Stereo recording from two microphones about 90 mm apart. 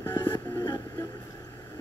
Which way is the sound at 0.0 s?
25° left (ahead or behind).